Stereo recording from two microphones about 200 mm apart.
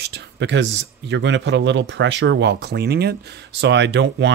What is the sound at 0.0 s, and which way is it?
Speech, 60° right (ahead or behind).